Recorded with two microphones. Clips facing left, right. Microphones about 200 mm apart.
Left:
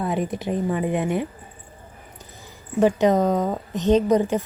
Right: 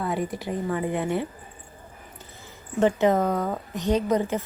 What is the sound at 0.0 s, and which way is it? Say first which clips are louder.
A woman's voice: left 3 dB; 20° left (ahead or behind).